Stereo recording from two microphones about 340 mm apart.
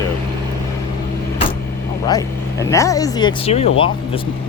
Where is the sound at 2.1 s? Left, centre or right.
Centre.